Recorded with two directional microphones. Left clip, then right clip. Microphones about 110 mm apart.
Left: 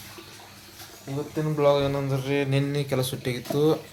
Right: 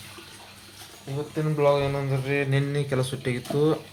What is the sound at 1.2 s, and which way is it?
Speech, 15° right (ahead or behind).